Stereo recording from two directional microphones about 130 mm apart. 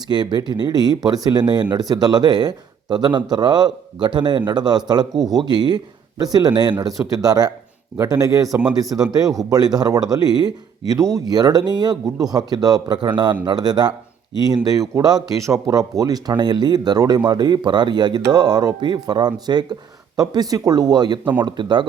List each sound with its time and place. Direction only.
0.1 s speech: 35° right (ahead or behind)